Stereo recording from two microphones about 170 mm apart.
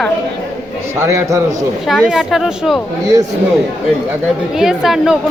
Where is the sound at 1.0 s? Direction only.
15° right (ahead or behind).